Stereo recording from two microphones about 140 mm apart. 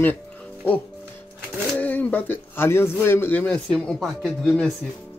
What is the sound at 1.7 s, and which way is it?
Speech, 10° left (ahead or behind).